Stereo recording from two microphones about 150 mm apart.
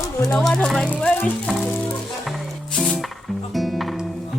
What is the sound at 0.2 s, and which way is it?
Speech, 5° left (ahead or behind).